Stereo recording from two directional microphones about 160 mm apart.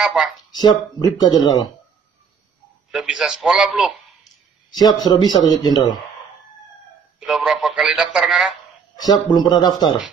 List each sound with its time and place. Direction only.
0.0 s speech: 5° right (ahead or behind)
0.5 s speech: 25° left (ahead or behind)
2.9 s speech: 5° right (ahead or behind)
4.6 s speech: 25° left (ahead or behind)
7.2 s speech: 5° right (ahead or behind)
8.9 s speech: 25° left (ahead or behind)